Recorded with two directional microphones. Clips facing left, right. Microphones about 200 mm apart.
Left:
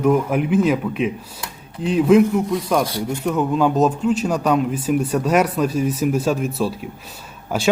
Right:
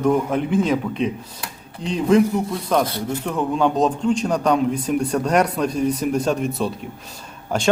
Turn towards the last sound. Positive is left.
turn(degrees=5)  # may be behind; listen again after turning